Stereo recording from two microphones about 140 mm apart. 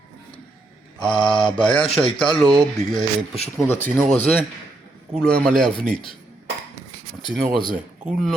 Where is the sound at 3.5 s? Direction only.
15° left (ahead or behind).